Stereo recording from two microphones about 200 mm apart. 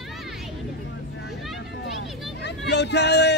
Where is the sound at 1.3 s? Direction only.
Centre (ahead or behind).